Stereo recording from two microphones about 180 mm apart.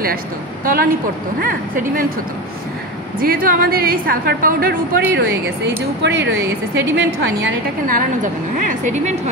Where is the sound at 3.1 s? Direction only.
55° right (ahead or behind).